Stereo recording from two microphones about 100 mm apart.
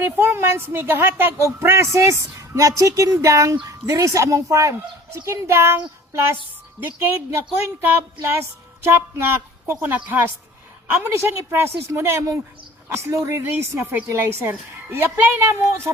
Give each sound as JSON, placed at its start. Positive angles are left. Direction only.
{"t": 0.2, "sound": "a woman's voice", "side_deg": -25}